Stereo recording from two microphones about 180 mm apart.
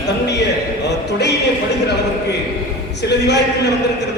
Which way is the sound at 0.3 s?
70° left (ahead or behind).